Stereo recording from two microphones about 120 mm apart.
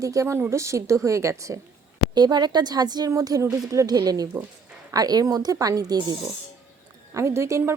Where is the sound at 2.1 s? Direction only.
35° right (ahead or behind).